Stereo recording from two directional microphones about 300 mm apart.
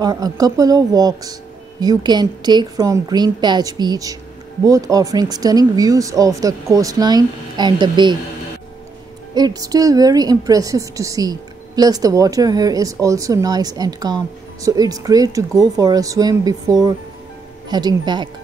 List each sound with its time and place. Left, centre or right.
0.0 s a woman's voice: centre
9.3 s a woman's voice: centre